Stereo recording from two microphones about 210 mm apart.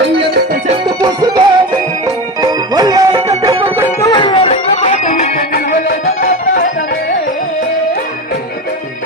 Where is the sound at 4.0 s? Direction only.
25° left (ahead or behind); by 6.6 s 45° left (ahead or behind).